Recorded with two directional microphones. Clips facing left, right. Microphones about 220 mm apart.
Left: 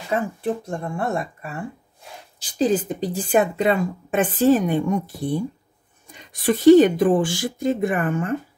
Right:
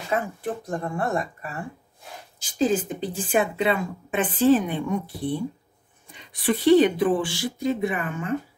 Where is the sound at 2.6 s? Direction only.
40° left (ahead or behind).